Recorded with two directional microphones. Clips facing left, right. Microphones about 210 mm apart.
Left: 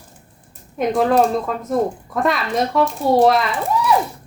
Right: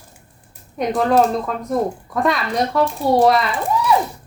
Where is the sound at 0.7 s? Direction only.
Centre (ahead or behind).